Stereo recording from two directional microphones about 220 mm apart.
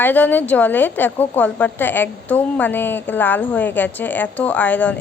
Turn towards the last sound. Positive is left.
turn(degrees=5)  # may be behind; listen again after turning